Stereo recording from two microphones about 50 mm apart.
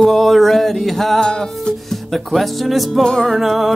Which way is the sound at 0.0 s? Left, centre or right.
Centre.